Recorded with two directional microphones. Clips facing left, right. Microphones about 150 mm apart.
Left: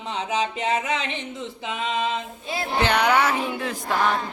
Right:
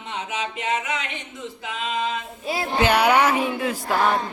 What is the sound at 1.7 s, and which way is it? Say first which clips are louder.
A capella: left 1 dB; 20° left (ahead or behind).